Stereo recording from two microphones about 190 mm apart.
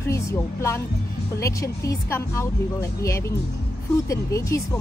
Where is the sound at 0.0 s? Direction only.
15° left (ahead or behind).